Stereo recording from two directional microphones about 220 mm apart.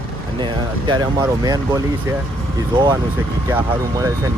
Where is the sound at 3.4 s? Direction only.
10° right (ahead or behind).